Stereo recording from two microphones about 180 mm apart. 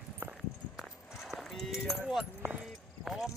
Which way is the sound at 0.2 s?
5° right (ahead or behind).